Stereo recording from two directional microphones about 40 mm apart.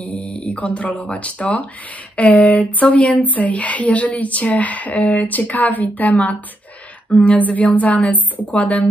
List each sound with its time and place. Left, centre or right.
0.0 s speech: left
7.3 s speech: left